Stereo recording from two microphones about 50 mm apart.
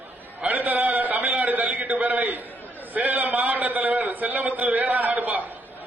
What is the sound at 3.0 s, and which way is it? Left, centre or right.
A man's voice, right.